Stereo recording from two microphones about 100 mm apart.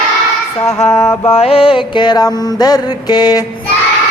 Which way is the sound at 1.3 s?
75° left (ahead or behind).